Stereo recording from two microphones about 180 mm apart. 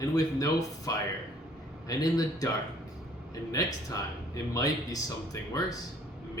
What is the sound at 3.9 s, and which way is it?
Speech, 20° left (ahead or behind).